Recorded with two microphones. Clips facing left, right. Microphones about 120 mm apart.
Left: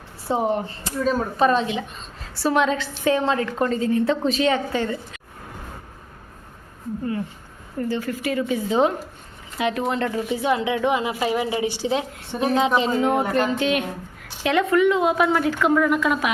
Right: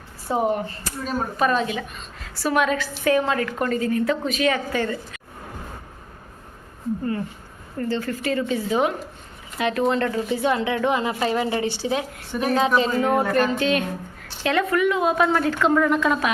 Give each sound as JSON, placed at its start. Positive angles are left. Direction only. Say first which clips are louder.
{"t": 0.3, "sound": "a woman's voice", "louder": "even", "side_deg": 30}
{"t": 7.8, "sound": "speech", "louder": "even", "side_deg": 10}